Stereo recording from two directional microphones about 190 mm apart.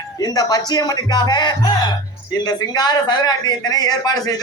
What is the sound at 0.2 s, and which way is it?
A man's voice, 20° left (ahead or behind).